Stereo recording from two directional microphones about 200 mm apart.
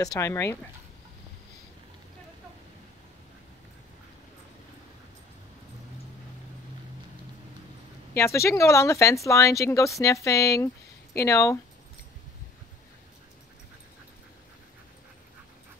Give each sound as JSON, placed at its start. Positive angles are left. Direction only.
{"t": 0.0, "sound": "speech", "side_deg": 15}
{"t": 8.2, "sound": "speech", "side_deg": 15}